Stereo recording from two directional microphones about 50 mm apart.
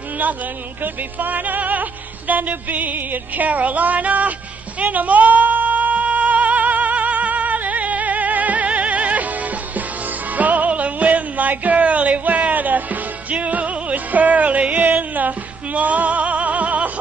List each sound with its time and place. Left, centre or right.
1.2 s music: right
10.3 s music: right